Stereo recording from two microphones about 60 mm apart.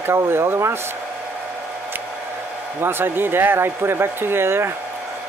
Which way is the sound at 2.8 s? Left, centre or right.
Right.